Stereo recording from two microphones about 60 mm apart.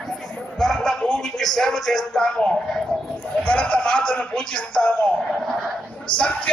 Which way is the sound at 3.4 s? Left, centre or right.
Left.